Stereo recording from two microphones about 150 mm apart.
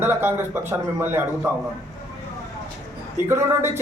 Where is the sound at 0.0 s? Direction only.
15° right (ahead or behind).